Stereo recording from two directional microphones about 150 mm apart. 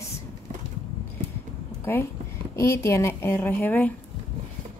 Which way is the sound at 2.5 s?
20° left (ahead or behind).